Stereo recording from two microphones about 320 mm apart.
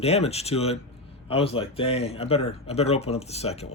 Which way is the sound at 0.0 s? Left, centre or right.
Centre.